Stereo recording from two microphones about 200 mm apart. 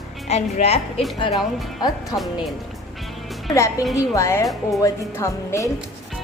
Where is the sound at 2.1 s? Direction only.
20° left (ahead or behind).